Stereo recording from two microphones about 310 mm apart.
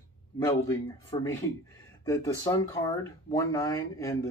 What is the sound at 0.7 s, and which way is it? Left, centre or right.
Speech, centre.